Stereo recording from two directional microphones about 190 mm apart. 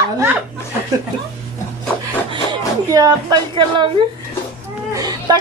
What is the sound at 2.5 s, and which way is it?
Speech, 20° right (ahead or behind).